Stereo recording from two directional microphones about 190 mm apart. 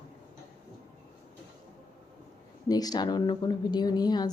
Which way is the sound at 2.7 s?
20° left (ahead or behind).